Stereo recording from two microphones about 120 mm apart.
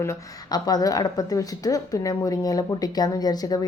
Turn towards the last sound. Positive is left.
turn(degrees=35)  # may be behind; listen again after turning